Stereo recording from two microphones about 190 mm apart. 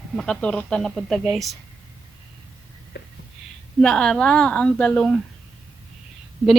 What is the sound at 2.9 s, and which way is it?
Whispering, 65° left (ahead or behind).